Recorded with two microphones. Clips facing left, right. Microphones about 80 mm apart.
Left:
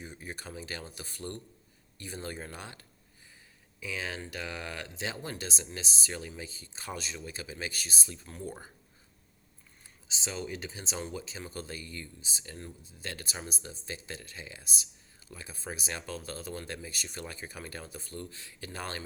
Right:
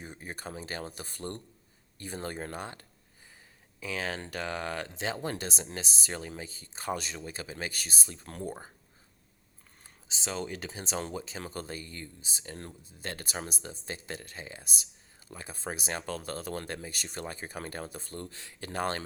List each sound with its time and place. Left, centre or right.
0.0 s speech: right
7.2 s speech: right
10.1 s speech: right